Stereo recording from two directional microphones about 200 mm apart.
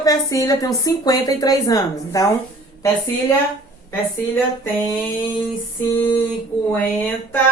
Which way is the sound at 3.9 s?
10° left (ahead or behind).